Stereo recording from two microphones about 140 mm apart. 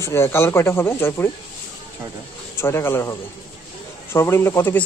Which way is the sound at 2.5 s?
15° left (ahead or behind).